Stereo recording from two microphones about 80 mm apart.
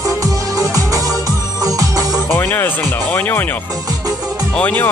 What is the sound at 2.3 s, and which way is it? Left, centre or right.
Speech, left.